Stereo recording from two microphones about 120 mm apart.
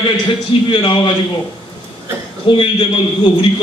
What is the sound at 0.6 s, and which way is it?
Speech, 45° left (ahead or behind).